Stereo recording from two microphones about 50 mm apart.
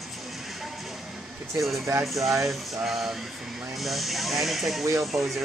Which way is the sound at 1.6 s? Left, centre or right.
Centre.